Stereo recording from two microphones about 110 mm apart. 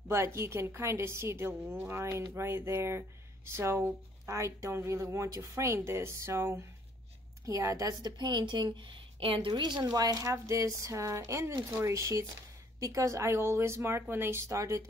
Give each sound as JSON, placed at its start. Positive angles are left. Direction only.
{"t": 0.1, "sound": "a woman's voice", "side_deg": -25}
{"t": 9.5, "sound": "speech", "side_deg": -40}